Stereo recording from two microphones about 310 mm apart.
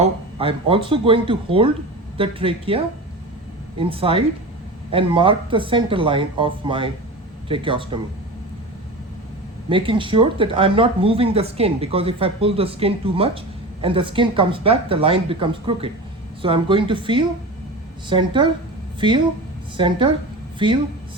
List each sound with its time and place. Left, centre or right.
0.0 s speech: centre
9.6 s speech: centre